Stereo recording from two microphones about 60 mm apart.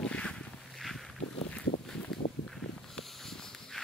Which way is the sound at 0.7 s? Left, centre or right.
Centre.